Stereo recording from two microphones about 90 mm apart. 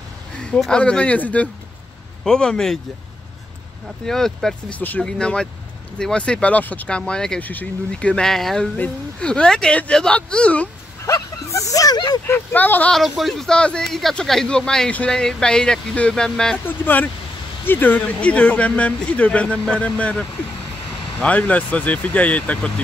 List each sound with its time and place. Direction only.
0.4 s speech: 10° left (ahead or behind)
4.0 s speech: 5° left (ahead or behind)
4.7 s speech: 15° left (ahead or behind)
8.7 s speech: 15° left (ahead or behind)
11.1 s speech: 40° left (ahead or behind)
12.3 s speech: 20° left (ahead or behind)
12.9 s speech: centre (ahead or behind)
16.6 s speech: 20° left (ahead or behind)